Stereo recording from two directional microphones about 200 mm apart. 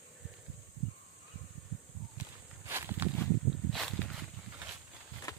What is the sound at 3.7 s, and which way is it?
Walk, centre (ahead or behind).